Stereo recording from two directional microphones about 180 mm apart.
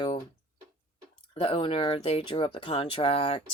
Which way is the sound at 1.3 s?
30° left (ahead or behind).